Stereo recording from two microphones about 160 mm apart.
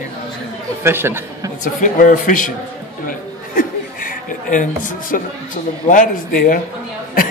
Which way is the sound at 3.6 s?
60° left (ahead or behind).